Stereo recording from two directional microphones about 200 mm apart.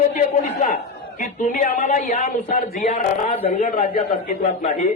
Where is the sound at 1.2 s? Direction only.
40° left (ahead or behind).